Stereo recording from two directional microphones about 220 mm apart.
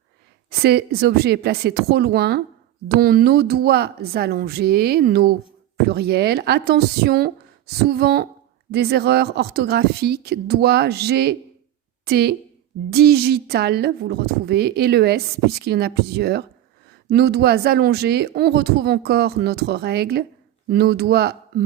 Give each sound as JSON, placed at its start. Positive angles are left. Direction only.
{"t": 0.6, "sound": "speech", "side_deg": -45}